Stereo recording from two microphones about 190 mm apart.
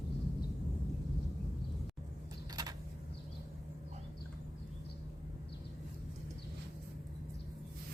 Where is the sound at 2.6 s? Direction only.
20° right (ahead or behind).